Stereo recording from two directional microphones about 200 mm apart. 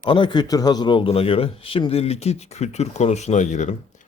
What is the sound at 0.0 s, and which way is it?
A man's voice, 25° left (ahead or behind).